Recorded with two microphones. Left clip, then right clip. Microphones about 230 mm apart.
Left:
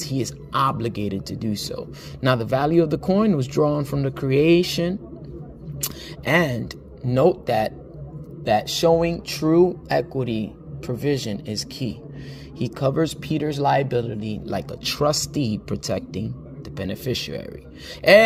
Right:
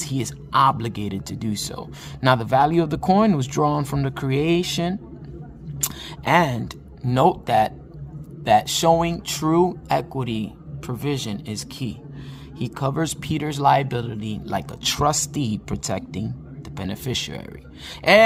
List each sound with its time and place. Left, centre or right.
0.0 s speech: centre
5.8 s single-lens reflex camera: centre
7.0 s speech: centre